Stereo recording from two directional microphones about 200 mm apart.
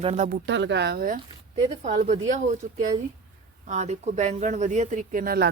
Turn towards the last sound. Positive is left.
turn(degrees=-50)  # may be behind; listen again after turning